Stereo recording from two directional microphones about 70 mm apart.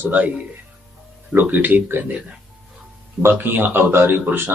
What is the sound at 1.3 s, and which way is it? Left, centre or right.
Speech, right.